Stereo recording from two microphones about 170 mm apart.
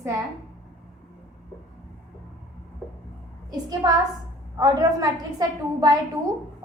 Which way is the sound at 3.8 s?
25° right (ahead or behind).